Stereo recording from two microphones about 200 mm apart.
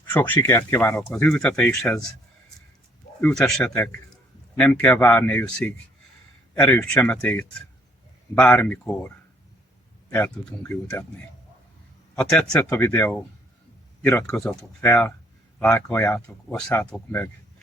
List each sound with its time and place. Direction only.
0.0 s speech: 10° left (ahead or behind)
3.2 s a man's voice: 5° left (ahead or behind)
12.1 s a man's voice: 5° left (ahead or behind)